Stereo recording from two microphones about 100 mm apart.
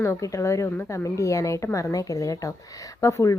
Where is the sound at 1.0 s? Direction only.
30° left (ahead or behind).